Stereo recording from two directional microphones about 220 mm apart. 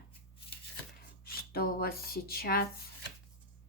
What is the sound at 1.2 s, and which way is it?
Speech, 45° left (ahead or behind).